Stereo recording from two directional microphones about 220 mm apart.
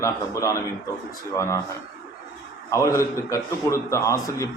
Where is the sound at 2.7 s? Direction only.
15° left (ahead or behind).